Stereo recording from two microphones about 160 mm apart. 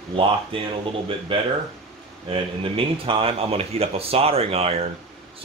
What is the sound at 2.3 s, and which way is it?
Speech, 35° right (ahead or behind).